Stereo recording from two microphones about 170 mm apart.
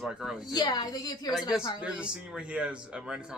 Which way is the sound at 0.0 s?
5° right (ahead or behind).